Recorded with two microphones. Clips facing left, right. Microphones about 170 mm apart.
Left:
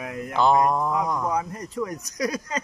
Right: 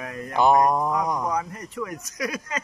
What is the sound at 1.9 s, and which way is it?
Speech, 35° left (ahead or behind).